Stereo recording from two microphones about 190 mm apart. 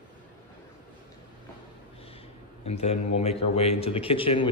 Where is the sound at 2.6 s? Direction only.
35° left (ahead or behind).